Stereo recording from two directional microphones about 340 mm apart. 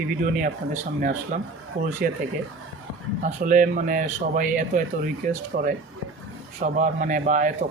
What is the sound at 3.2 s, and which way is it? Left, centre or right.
Speech, right.